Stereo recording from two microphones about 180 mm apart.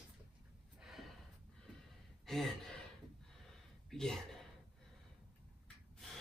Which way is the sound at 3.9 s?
5° left (ahead or behind).